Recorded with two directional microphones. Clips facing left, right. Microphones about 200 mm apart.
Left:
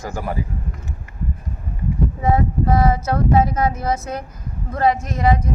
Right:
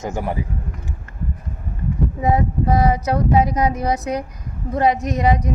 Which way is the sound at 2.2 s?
15° right (ahead or behind).